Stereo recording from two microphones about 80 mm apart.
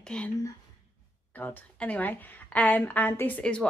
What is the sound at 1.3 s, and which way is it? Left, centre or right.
A woman's voice, centre.